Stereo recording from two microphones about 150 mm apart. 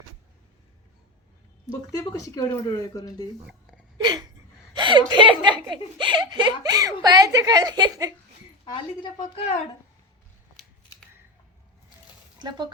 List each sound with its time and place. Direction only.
2.1 s speech: 25° left (ahead or behind)
3.9 s a sound: 30° right (ahead or behind)
4.7 s speech: 30° right (ahead or behind)
8.6 s speech: 30° left (ahead or behind)
12.4 s speech: 30° right (ahead or behind)